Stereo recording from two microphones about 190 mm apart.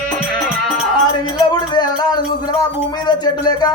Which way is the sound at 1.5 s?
20° left (ahead or behind).